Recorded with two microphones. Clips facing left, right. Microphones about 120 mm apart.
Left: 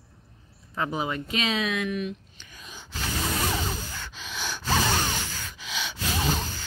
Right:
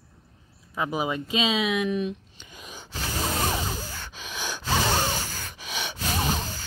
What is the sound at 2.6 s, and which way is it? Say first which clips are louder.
Gasp: right 3 dB; 15° right (ahead or behind).